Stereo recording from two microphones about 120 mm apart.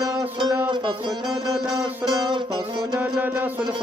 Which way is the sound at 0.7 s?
40° right (ahead or behind).